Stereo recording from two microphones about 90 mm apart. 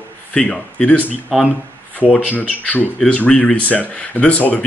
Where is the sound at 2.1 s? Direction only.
20° left (ahead or behind).